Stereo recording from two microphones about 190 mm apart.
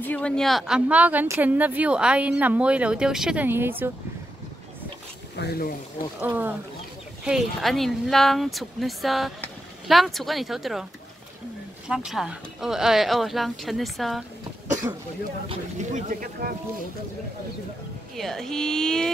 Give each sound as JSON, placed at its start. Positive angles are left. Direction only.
{"t": 0.0, "sound": "speech", "side_deg": 5}
{"t": 5.3, "sound": "speech", "side_deg": 60}
{"t": 6.2, "sound": "speech", "side_deg": -10}
{"t": 11.9, "sound": "speech", "side_deg": 0}
{"t": 15.4, "sound": "speech", "side_deg": -35}
{"t": 18.1, "sound": "speech", "side_deg": 0}